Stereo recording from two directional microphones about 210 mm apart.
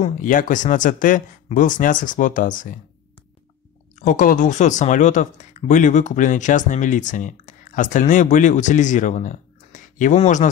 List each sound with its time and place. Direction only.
0.0 s speech: 40° left (ahead or behind)
4.0 s speech: 40° left (ahead or behind)